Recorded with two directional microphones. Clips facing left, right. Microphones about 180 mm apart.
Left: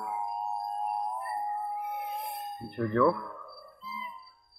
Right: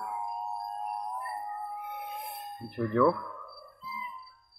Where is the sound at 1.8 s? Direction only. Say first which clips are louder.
Left 4 dB; centre (ahead or behind).